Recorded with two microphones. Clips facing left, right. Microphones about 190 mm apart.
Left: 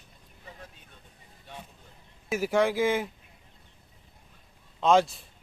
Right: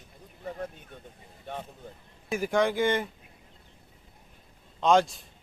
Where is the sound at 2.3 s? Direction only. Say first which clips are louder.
Left 1 dB; 5° left (ahead or behind).